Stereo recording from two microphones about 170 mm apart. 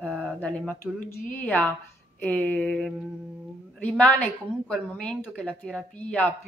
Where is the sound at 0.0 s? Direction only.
5° left (ahead or behind).